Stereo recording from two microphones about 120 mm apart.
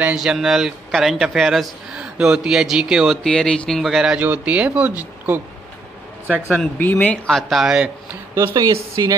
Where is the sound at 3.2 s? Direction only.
5° left (ahead or behind); by 5.4 s 15° right (ahead or behind).